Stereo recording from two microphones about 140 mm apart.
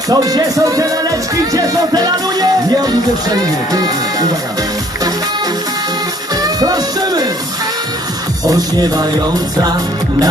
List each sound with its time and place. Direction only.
0.1 s speech: 25° right (ahead or behind)
1.5 s music: 30° right (ahead or behind)
6.4 s music: 25° right (ahead or behind)
8.4 s speech: 30° right (ahead or behind)